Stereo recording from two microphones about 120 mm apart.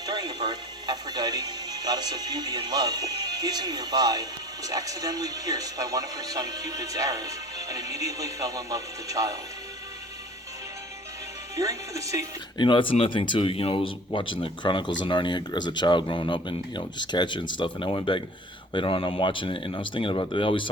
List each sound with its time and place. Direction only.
0.0 s speech: 35° right (ahead or behind)
11.5 s speech: 25° right (ahead or behind)
12.5 s speech: 45° left (ahead or behind)